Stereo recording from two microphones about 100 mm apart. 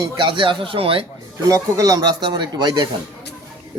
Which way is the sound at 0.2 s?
55° right (ahead or behind).